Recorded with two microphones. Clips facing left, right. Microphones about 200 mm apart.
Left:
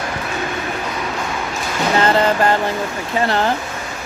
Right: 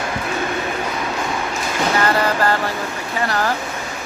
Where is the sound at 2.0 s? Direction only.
20° left (ahead or behind).